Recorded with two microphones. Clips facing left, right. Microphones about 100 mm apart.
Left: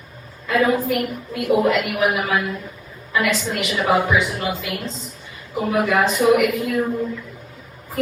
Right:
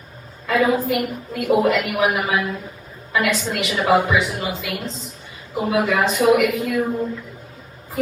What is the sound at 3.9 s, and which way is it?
Speech, centre (ahead or behind).